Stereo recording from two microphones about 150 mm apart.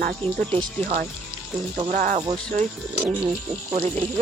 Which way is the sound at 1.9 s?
55° right (ahead or behind).